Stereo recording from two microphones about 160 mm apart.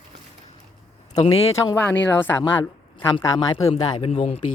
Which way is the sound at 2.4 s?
30° left (ahead or behind).